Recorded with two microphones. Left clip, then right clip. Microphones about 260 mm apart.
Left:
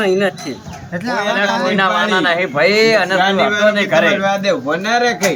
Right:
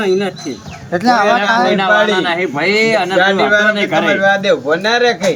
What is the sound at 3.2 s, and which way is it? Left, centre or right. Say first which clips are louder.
Speech: right 3 dB; centre.